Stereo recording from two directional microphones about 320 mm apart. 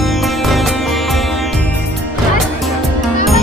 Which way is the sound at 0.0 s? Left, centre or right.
Centre.